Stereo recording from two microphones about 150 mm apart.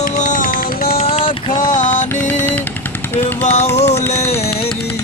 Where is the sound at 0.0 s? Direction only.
55° left (ahead or behind).